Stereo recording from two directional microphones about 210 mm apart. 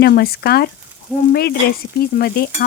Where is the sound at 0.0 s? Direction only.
45° left (ahead or behind).